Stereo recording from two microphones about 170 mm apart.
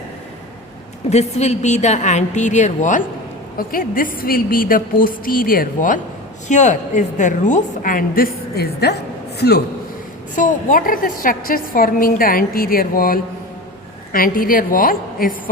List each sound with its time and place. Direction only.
1.1 s a woman's voice: 40° left (ahead or behind)
3.7 s a woman's voice: 55° left (ahead or behind)
10.3 s a woman's voice: 50° left (ahead or behind)